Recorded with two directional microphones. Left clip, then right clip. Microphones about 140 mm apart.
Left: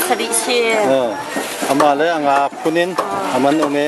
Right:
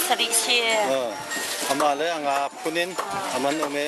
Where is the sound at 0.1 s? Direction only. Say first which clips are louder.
Left 1 dB; 10° right (ahead or behind).